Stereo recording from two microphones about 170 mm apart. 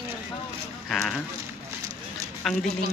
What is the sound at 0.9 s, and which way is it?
Speech, centre (ahead or behind).